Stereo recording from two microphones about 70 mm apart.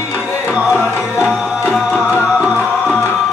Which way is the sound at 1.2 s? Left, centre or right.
Right.